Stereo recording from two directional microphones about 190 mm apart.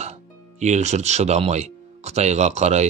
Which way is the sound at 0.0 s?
35° right (ahead or behind).